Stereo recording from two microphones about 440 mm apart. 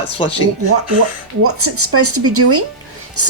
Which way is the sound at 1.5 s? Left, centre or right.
Right.